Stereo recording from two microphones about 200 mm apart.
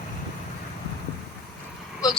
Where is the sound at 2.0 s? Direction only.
20° left (ahead or behind).